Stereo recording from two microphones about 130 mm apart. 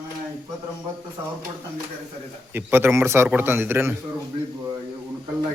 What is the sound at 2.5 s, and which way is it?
A man's voice, 15° right (ahead or behind).